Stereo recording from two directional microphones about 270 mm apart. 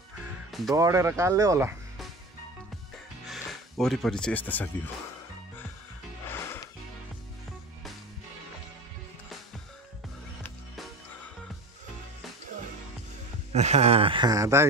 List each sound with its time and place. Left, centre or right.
0.7 s speech: centre
3.3 s speech: centre
6.2 s music: centre
13.5 s speech: right